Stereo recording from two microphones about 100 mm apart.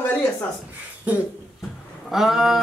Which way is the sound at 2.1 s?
5° right (ahead or behind).